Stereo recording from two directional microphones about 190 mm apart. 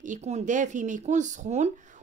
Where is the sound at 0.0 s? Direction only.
40° right (ahead or behind).